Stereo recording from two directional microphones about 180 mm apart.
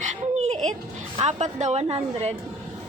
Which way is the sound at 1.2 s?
40° right (ahead or behind).